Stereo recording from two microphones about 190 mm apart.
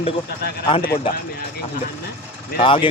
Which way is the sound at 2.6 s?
25° left (ahead or behind).